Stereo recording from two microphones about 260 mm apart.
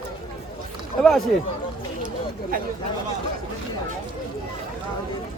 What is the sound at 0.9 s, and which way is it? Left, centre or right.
Speech, centre.